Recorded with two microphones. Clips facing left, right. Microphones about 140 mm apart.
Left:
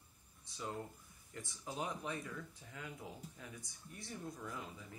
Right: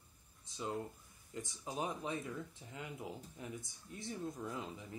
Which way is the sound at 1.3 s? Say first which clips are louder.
Right 3 dB; 20° right (ahead or behind).